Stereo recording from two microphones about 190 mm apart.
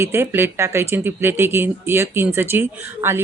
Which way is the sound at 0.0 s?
15° right (ahead or behind).